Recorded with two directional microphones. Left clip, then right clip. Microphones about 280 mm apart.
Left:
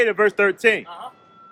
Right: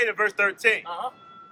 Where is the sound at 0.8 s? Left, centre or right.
Centre.